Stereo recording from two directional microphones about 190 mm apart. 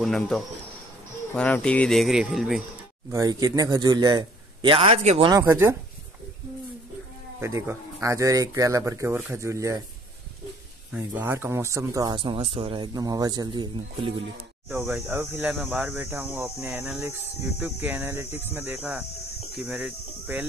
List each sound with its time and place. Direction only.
0.0 s speech: centre (ahead or behind)
3.1 s speech: 20° right (ahead or behind)
5.4 s speech: 15° right (ahead or behind)
7.3 s speech: 15° right (ahead or behind)
10.9 s speech: 10° right (ahead or behind)
14.7 s speech: 10° right (ahead or behind)